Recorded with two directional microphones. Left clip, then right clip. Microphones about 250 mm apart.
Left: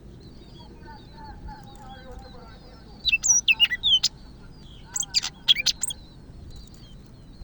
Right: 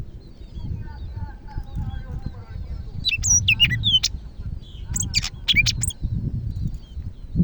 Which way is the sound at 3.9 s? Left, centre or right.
Right.